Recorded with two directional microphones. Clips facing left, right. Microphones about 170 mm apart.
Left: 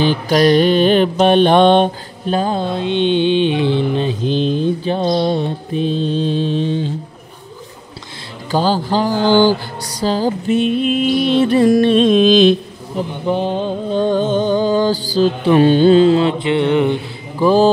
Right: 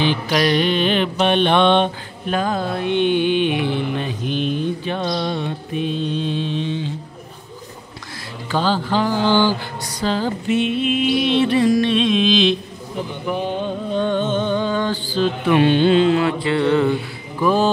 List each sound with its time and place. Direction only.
0.0 s mantra: 40° left (ahead or behind)
8.5 s mantra: 40° left (ahead or behind)
13.2 s mantra: 30° left (ahead or behind)